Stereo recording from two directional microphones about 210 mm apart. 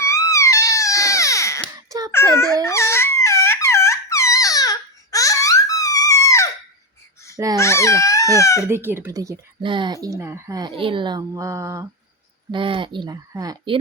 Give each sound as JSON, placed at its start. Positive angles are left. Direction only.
{"t": 0.0, "sound": "crying", "side_deg": 15}
{"t": 1.9, "sound": "a sound", "side_deg": -15}
{"t": 2.1, "sound": "a sound", "side_deg": 10}
{"t": 7.3, "sound": "babbling", "side_deg": -15}
{"t": 7.6, "sound": "crying", "side_deg": 15}
{"t": 8.7, "sound": "speech", "side_deg": -10}